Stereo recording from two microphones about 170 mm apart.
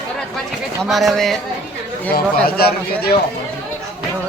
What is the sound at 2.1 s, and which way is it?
Speech, 65° left (ahead or behind).